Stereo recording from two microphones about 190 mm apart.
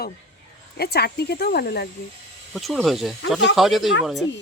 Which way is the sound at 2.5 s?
Centre (ahead or behind).